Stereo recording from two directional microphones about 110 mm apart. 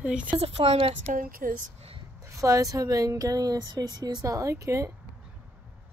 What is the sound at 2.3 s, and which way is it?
Speech, 30° right (ahead or behind).